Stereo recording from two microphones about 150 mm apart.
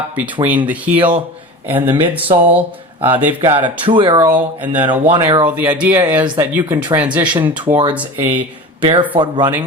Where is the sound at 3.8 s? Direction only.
35° right (ahead or behind).